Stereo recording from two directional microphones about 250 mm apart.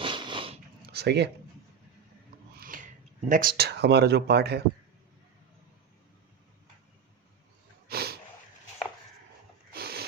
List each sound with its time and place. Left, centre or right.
0.0 s biting: centre
0.9 s speech: right
2.6 s speech: right
7.9 s snort: right
9.7 s a sound: right